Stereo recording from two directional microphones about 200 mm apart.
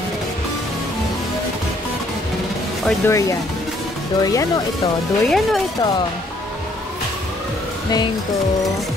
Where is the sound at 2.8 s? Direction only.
15° left (ahead or behind).